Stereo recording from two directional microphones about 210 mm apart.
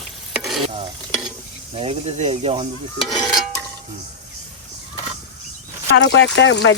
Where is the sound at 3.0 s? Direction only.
Centre (ahead or behind).